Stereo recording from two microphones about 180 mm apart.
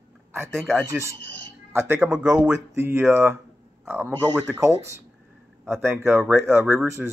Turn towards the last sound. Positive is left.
turn(degrees=-10)  # may be behind; listen again after turning